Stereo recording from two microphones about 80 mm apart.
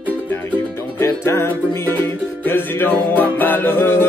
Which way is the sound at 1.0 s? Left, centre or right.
Left.